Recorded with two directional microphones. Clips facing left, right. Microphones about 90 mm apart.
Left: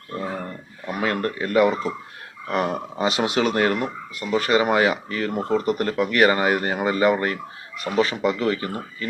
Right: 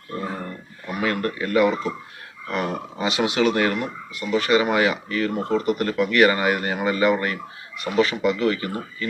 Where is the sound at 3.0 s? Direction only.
40° left (ahead or behind).